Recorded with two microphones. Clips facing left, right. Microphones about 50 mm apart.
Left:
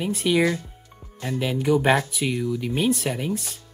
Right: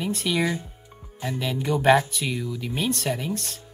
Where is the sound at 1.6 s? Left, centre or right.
Centre.